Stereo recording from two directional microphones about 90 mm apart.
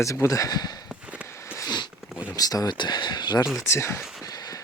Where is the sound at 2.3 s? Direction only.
45° left (ahead or behind).